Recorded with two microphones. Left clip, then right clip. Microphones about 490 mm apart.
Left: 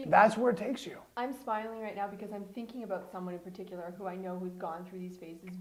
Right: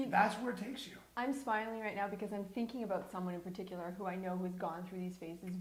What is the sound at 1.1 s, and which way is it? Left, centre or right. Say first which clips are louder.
A woman's voice: left 2 dB; centre.